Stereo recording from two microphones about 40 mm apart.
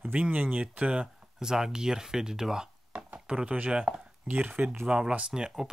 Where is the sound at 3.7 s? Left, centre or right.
Right.